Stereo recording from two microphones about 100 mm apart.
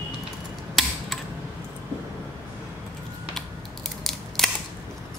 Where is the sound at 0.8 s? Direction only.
Centre (ahead or behind).